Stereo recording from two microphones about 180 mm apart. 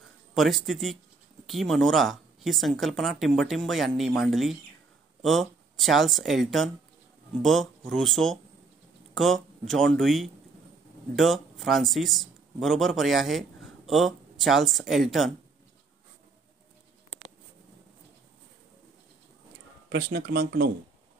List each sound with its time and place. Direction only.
0.3 s speech: centre (ahead or behind)
7.9 s speech: centre (ahead or behind)
19.9 s speech: 60° right (ahead or behind)